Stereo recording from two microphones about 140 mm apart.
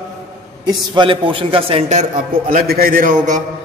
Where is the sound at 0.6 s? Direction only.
35° right (ahead or behind).